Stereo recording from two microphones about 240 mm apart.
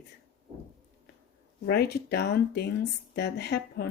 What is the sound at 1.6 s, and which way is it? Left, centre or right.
Speech, left.